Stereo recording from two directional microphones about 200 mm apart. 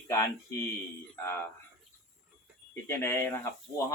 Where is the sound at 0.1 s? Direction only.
15° left (ahead or behind).